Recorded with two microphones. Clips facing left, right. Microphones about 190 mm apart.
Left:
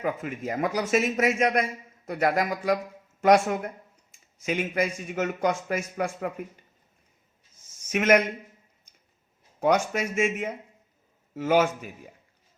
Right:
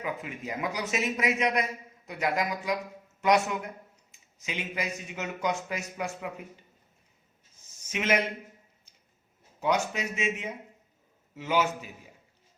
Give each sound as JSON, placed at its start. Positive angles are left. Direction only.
{"t": 0.0, "sound": "speech", "side_deg": 50}
{"t": 7.9, "sound": "a man's voice", "side_deg": 65}
{"t": 9.6, "sound": "speech", "side_deg": 50}